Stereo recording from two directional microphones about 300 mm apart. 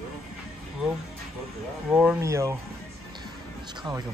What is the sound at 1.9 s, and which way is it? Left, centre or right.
Speech, centre.